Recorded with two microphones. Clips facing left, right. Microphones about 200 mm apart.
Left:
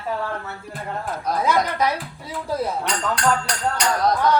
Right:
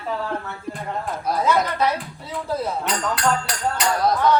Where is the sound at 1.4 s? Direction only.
10° left (ahead or behind).